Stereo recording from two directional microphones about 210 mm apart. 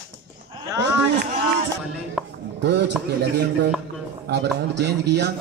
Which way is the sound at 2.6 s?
55° right (ahead or behind).